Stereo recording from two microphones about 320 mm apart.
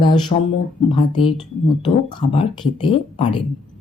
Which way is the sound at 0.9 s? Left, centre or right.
Centre.